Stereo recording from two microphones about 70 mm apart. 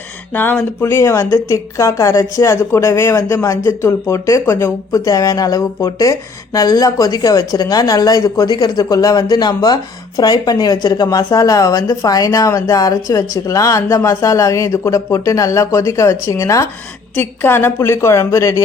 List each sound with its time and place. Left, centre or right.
0.8 s a woman's voice: left
4.9 s speech: left
17.2 s a woman's voice: left